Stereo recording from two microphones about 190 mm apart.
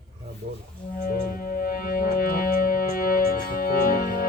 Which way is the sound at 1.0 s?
50° left (ahead or behind).